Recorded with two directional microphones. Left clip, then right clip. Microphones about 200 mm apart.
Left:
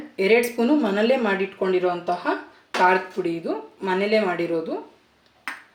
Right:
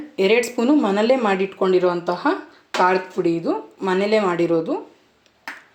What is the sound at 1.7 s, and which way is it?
Speech, 40° right (ahead or behind).